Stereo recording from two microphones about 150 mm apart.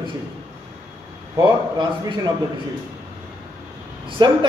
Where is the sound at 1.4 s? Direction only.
30° right (ahead or behind).